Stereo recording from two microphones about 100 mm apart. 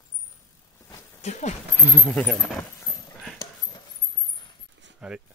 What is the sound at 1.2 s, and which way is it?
Speech, 90° left.